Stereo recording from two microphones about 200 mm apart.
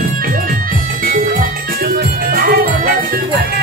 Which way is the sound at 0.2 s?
45° right (ahead or behind).